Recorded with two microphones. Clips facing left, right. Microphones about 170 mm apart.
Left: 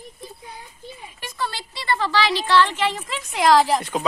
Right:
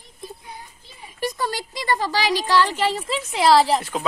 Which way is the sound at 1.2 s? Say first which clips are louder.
Right 5 dB; 40° right (ahead or behind).